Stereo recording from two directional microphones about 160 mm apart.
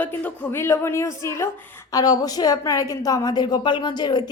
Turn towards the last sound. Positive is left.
turn(degrees=25)  # may be behind; listen again after turning